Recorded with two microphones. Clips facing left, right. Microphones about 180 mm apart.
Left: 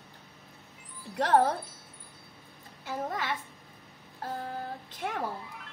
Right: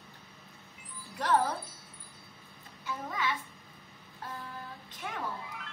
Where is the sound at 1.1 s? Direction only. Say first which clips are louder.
Left 4 dB; 65° left (ahead or behind).